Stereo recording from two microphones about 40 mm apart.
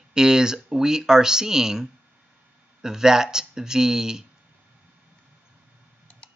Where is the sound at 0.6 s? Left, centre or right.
Centre.